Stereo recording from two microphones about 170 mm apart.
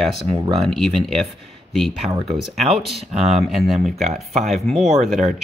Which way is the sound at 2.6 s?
35° right (ahead or behind).